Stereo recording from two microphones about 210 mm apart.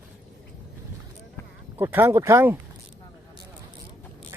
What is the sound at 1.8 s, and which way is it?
Speech, 10° right (ahead or behind).